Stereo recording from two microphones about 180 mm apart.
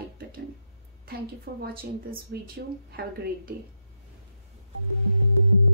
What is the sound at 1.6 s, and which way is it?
Speech, 55° right (ahead or behind).